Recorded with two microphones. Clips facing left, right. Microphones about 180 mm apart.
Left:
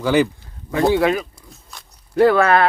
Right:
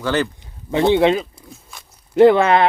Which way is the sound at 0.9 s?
25° right (ahead or behind).